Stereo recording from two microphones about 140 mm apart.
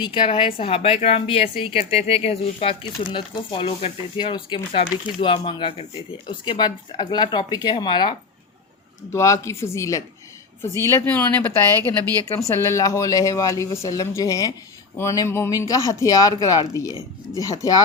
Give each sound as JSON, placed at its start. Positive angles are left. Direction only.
{"t": 0.0, "sound": "speech", "side_deg": 35}
{"t": 4.2, "sound": "speech", "side_deg": 35}
{"t": 9.1, "sound": "speech", "side_deg": 20}
{"t": 12.6, "sound": "speech", "side_deg": 20}